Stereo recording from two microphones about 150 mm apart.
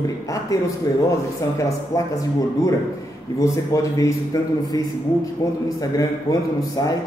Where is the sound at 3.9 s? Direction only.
20° left (ahead or behind).